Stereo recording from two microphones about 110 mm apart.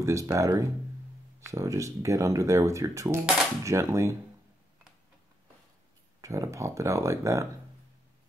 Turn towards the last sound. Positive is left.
turn(degrees=-30)  # may be behind; listen again after turning